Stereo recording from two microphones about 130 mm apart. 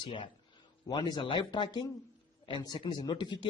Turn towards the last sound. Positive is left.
turn(degrees=35)  # may be behind; listen again after turning